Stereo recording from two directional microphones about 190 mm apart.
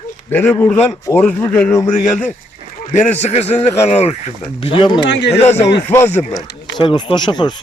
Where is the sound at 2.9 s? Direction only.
35° left (ahead or behind).